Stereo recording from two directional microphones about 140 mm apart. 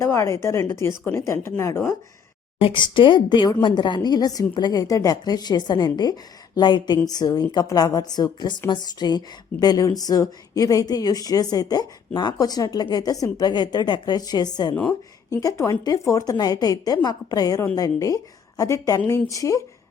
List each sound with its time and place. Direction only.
0.0 s a woman's voice: 20° left (ahead or behind)
2.6 s a woman's voice: 35° left (ahead or behind)